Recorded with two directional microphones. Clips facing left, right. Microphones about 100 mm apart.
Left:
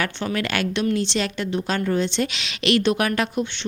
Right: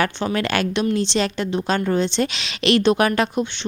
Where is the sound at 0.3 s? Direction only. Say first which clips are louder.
Right 2 dB; 30° right (ahead or behind).